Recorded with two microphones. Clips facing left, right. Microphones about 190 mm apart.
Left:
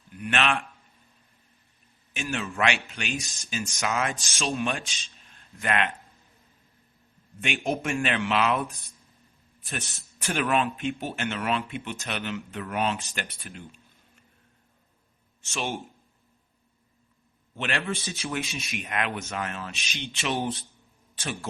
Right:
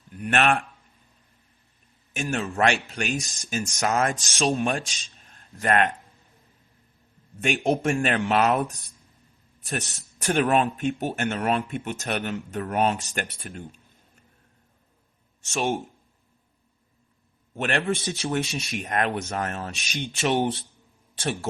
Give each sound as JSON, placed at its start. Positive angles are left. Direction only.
{"t": 0.2, "sound": "speech", "side_deg": -45}
{"t": 2.1, "sound": "speech", "side_deg": -40}
{"t": 7.4, "sound": "speech", "side_deg": -40}
{"t": 15.5, "sound": "speech", "side_deg": -45}
{"t": 17.5, "sound": "speech", "side_deg": -45}
{"t": 18.2, "sound": "speech", "side_deg": -35}
{"t": 20.3, "sound": "a man's voice", "side_deg": -30}